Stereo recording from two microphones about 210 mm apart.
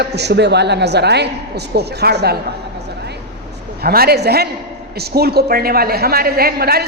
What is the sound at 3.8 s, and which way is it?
A woman's voice, 45° right (ahead or behind).